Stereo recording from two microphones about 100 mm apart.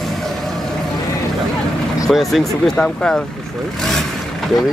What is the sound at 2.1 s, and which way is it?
Speech, centre (ahead or behind).